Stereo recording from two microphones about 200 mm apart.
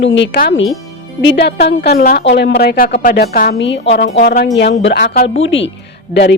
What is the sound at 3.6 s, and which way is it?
Speech, 65° left (ahead or behind).